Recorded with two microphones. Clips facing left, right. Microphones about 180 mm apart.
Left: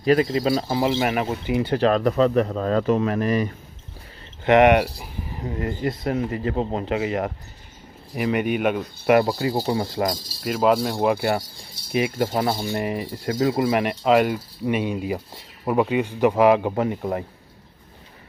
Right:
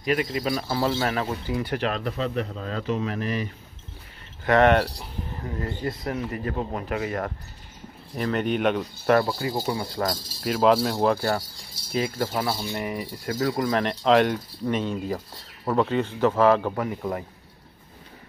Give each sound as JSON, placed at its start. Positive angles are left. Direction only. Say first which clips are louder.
{"t": 0.0, "sound": "speech", "louder": "left 6 dB", "side_deg": 35}
{"t": 0.7, "sound": "speech", "louder": "left 3 dB", "side_deg": 15}
{"t": 1.9, "sound": "speech", "louder": "left 9 dB", "side_deg": 45}
{"t": 4.5, "sound": "speech", "louder": "left 3 dB", "side_deg": 15}
{"t": 9.2, "sound": "speech", "louder": "left 4 dB", "side_deg": 25}
{"t": 10.4, "sound": "speech", "louder": "even", "side_deg": 0}
{"t": 11.9, "sound": "speech", "louder": "left 4 dB", "side_deg": 20}